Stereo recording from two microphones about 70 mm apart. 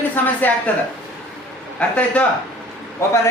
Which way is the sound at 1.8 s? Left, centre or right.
Centre.